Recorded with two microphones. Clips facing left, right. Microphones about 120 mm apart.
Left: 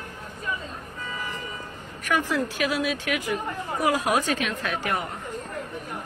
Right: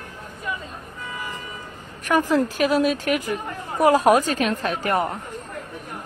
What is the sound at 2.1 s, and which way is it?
A woman's voice, 40° right (ahead or behind).